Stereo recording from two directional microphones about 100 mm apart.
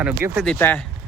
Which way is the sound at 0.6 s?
20° left (ahead or behind).